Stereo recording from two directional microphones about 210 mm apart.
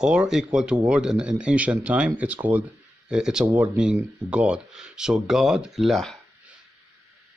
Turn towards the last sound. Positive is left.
turn(degrees=0)  # may be behind; listen again after turning